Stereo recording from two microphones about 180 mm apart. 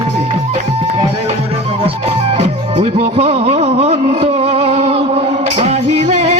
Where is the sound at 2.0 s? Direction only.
35° right (ahead or behind).